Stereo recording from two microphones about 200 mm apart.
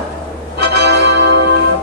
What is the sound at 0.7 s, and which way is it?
Music, 55° right (ahead or behind).